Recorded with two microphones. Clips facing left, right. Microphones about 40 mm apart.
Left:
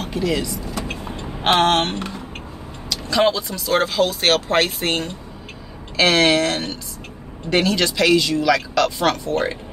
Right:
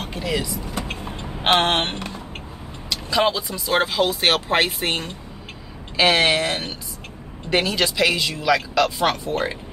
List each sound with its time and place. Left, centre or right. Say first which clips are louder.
0.0 s vehicle: left 6 dB; centre
0.3 s speech: right 1 dB; centre
0.8 s vehicle: left 2 dB; centre
1.5 s a sound: left 2 dB; right
2.9 s speech: left 2 dB; centre